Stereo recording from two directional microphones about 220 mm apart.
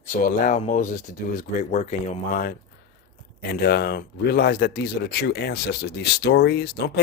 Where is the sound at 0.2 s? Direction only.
35° left (ahead or behind).